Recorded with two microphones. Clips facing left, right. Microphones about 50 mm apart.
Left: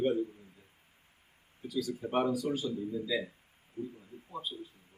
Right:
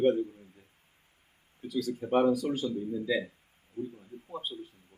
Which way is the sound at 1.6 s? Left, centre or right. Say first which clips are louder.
Right 3 dB; right.